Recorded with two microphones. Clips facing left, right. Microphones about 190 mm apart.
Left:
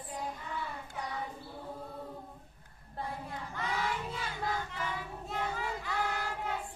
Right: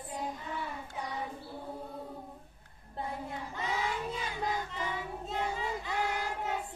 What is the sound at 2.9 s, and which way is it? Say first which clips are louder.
Child singing: right 2 dB; 20° right (ahead or behind).